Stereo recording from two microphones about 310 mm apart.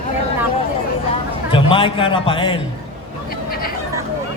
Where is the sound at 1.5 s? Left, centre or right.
Centre.